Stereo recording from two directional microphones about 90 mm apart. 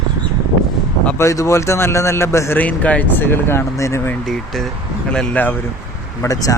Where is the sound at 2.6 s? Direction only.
15° left (ahead or behind); by 4.0 s 30° left (ahead or behind).